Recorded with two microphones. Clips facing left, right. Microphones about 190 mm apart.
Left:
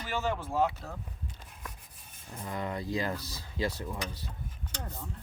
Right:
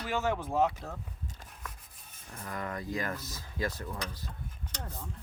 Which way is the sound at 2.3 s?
25° left (ahead or behind).